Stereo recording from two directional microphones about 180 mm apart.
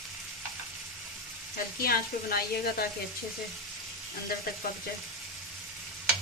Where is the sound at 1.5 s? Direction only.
55° left (ahead or behind).